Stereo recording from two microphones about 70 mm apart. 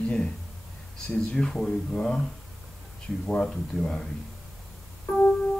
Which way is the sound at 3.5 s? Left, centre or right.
Centre.